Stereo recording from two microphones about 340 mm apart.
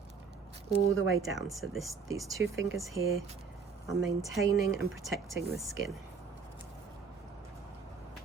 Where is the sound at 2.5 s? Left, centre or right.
Right.